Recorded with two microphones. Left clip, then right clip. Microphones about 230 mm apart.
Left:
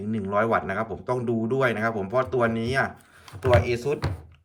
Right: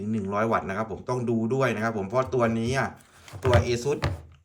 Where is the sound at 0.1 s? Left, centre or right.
Centre.